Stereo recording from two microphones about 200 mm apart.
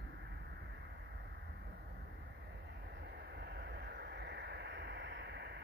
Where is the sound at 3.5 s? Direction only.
50° right (ahead or behind).